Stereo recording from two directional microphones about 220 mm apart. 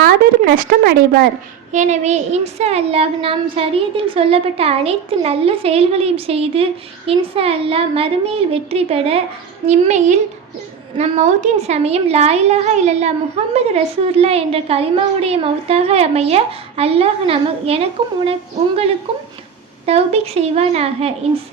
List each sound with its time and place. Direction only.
0.0 s a sound: 45° right (ahead or behind)
1.7 s a woman's voice: 30° right (ahead or behind)
19.1 s a woman's voice: 25° right (ahead or behind)